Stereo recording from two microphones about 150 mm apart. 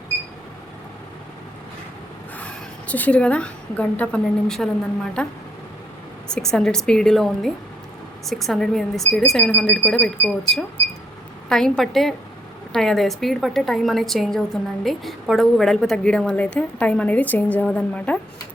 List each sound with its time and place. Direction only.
2.4 s a woman's voice: 10° left (ahead or behind)